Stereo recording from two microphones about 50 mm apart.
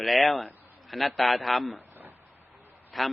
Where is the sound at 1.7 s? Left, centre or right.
Right.